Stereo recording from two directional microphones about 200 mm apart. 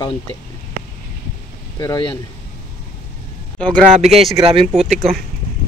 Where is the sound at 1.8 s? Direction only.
20° left (ahead or behind).